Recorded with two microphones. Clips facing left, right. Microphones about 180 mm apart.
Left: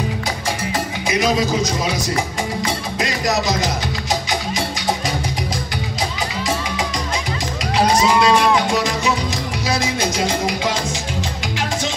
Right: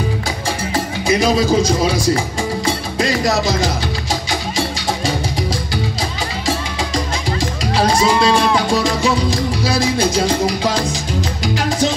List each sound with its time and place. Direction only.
1.0 s speech: 30° right (ahead or behind)
2.6 s music: 30° right (ahead or behind)
7.7 s music: 30° right (ahead or behind)